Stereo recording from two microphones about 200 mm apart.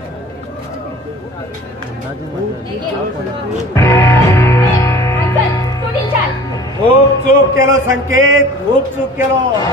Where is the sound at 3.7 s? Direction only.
15° left (ahead or behind).